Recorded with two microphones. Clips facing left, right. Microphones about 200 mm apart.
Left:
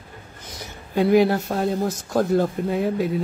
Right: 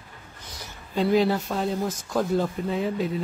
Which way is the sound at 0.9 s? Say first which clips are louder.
Left 4 dB; 60° left (ahead or behind).